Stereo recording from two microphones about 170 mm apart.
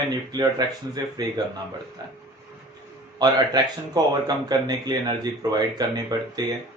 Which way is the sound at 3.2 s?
25° right (ahead or behind).